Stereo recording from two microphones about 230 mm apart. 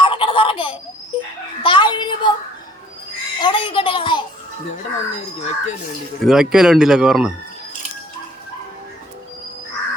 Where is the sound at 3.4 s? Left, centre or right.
Left.